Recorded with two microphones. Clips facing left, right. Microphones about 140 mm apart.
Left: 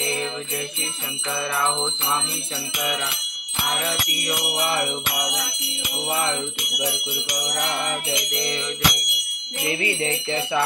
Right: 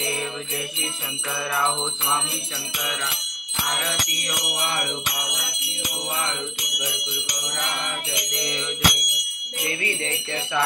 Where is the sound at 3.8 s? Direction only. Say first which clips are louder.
Left 2 dB; 5° left (ahead or behind).